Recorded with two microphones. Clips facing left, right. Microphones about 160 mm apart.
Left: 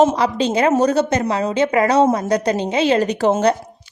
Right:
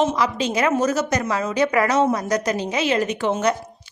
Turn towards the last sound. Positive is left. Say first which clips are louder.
# left 5 dB
turn(degrees=40)  # may be behind; listen again after turning